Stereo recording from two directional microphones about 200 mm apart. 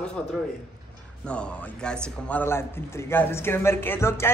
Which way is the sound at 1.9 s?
10° left (ahead or behind).